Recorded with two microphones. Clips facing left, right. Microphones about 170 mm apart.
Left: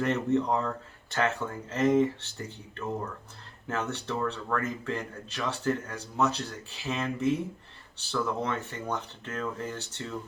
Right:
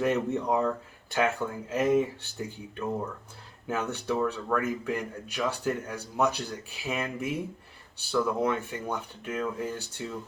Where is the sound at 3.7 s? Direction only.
10° right (ahead or behind).